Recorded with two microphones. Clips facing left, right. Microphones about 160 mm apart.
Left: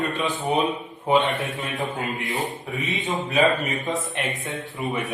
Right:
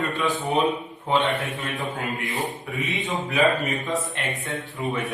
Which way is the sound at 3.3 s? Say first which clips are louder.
Left 1 dB; 20° left (ahead or behind).